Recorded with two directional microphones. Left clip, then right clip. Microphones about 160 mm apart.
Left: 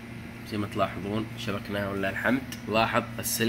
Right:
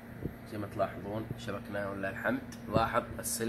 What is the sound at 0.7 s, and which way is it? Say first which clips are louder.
Speech: left 5 dB; 20° left (ahead or behind).